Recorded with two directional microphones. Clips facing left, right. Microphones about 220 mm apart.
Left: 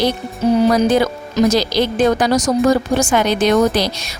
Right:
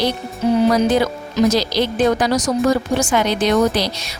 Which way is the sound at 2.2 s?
45° left (ahead or behind).